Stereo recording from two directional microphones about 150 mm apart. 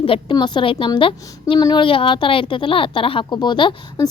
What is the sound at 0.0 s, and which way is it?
Speech, 35° left (ahead or behind).